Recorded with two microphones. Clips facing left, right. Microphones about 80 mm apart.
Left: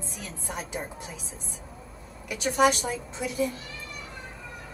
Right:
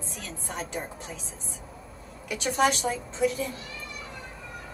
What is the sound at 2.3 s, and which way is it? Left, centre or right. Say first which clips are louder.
A woman's voice: left 2 dB; centre.